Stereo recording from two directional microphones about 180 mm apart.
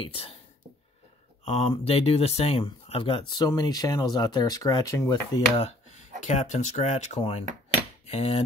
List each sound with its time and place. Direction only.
0.0 s speech: 30° left (ahead or behind)
1.4 s speech: 35° left (ahead or behind); by 5.4 s 15° left (ahead or behind)
5.6 s speech: 40° left (ahead or behind)
8.0 s cutlery: 35° left (ahead or behind)